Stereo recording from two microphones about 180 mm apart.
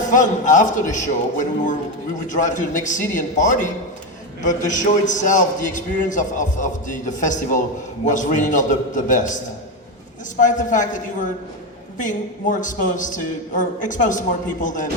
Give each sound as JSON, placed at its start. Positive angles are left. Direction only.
{"t": 0.1, "sound": "a man's voice", "side_deg": 45}
{"t": 10.4, "sound": "a man's voice", "side_deg": 45}